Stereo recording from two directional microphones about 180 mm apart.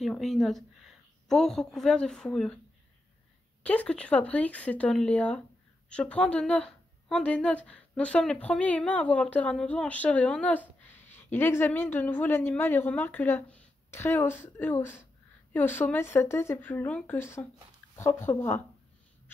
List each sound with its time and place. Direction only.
0.0 s a woman's voice: centre (ahead or behind)
3.6 s speech: 5° left (ahead or behind)